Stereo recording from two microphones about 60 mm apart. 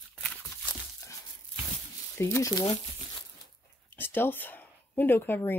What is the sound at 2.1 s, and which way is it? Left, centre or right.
Speech, left.